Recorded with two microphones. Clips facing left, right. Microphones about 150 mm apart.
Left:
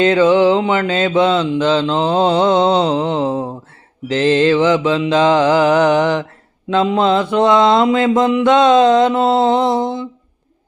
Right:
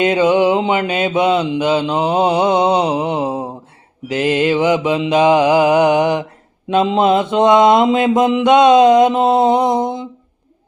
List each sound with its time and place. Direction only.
0.0 s mantra: 15° right (ahead or behind)